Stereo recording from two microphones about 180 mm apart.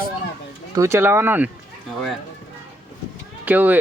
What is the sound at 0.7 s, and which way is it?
Speech, 15° right (ahead or behind).